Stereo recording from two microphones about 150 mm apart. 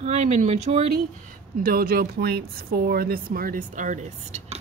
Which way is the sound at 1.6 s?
80° right.